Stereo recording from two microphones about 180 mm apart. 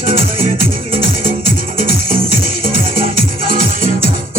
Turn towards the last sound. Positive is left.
turn(degrees=-50)  # may be behind; listen again after turning